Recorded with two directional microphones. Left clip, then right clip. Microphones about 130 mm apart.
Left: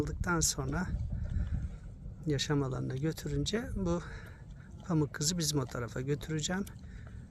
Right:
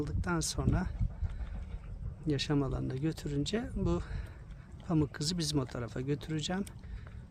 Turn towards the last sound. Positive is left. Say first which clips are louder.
# left 1 dB
turn(degrees=-20)  # may be behind; listen again after turning